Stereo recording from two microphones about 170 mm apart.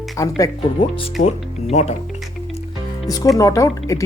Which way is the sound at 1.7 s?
40° left (ahead or behind).